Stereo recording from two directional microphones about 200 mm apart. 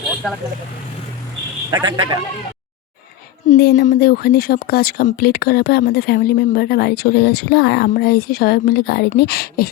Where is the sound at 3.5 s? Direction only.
60° left (ahead or behind).